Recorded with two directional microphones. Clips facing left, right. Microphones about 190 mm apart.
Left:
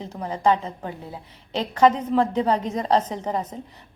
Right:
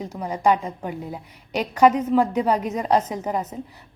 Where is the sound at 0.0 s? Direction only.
10° right (ahead or behind).